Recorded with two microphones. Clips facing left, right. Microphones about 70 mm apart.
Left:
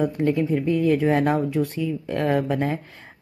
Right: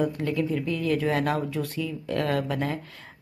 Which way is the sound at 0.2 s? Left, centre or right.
Left.